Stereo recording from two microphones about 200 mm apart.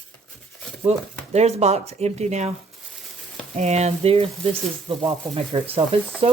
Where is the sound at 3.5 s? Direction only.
35° right (ahead or behind).